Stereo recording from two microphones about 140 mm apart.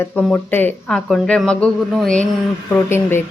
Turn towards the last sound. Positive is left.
turn(degrees=15)  # may be behind; listen again after turning